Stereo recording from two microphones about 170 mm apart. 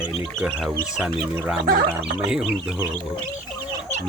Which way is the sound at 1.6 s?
75° right (ahead or behind).